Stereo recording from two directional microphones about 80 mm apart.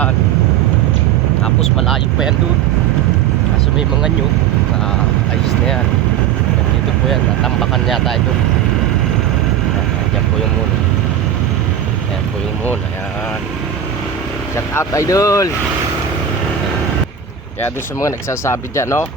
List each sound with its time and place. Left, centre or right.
7.6 s speech: centre
14.5 s speech: left
18.0 s speech: left